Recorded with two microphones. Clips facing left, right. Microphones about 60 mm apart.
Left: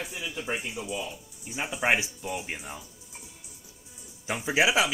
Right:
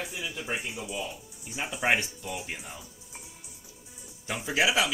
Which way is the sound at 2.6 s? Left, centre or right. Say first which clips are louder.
Left 3 dB; centre.